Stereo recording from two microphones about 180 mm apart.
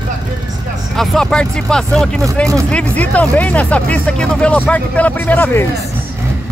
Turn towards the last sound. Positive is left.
turn(degrees=10)  # may be behind; listen again after turning